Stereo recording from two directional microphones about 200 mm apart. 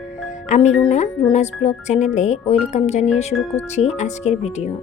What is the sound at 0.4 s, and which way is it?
Speech, 35° left (ahead or behind).